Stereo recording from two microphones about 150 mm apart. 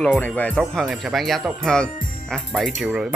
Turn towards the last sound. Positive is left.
turn(degrees=-5)  # may be behind; listen again after turning